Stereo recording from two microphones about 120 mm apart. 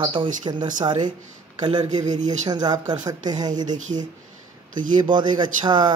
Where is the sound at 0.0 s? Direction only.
45° right (ahead or behind).